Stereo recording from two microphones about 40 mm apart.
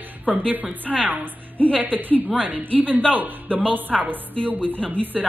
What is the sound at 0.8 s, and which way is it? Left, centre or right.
A woman's voice, right.